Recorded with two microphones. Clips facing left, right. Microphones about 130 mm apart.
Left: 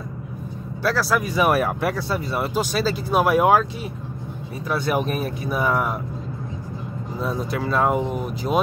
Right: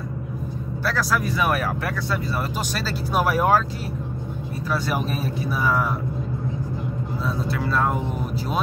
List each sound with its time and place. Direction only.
0.8 s speech: 5° left (ahead or behind)
1.3 s speech: 20° left (ahead or behind)
3.2 s speech: 15° left (ahead or behind)
5.6 s speech: 20° left (ahead or behind)
7.2 s speech: 15° left (ahead or behind)